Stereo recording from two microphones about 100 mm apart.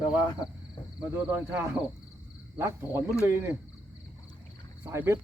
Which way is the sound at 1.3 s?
20° right (ahead or behind).